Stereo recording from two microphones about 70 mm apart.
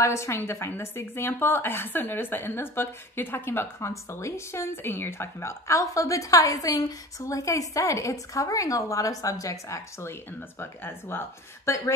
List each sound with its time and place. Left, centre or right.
0.0 s a woman's voice: left
10.6 s speech: left